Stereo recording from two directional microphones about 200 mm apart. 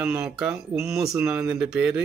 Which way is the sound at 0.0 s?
5° right (ahead or behind).